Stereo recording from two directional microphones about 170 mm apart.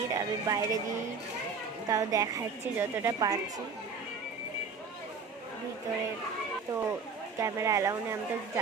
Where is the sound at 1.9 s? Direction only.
20° right (ahead or behind).